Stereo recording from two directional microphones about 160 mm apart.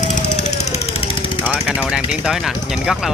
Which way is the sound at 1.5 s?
5° right (ahead or behind).